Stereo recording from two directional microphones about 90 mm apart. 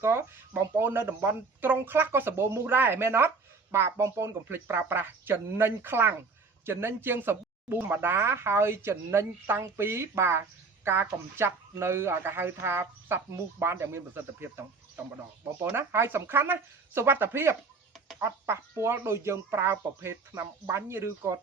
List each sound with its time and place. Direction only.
0.0 s speech: 30° right (ahead or behind)